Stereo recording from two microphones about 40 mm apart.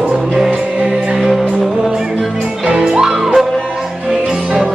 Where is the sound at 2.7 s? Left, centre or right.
Centre.